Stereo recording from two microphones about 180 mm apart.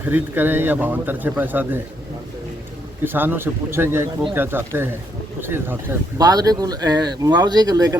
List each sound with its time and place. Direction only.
0.0 s speech: 10° right (ahead or behind)
3.0 s speech: 10° right (ahead or behind)